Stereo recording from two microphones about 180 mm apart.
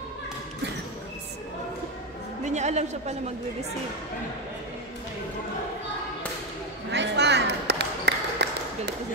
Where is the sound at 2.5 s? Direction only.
40° right (ahead or behind).